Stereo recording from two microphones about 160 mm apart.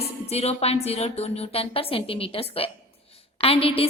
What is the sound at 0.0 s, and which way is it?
A woman's voice, 40° left (ahead or behind).